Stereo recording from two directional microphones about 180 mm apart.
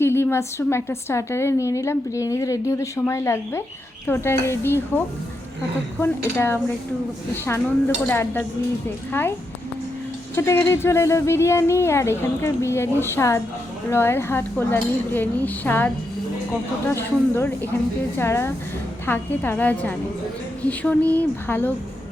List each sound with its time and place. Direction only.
0.0 s a woman's voice: 15° left (ahead or behind)
8.0 s a woman's voice: 10° left (ahead or behind)
10.3 s a woman's voice: 15° left (ahead or behind)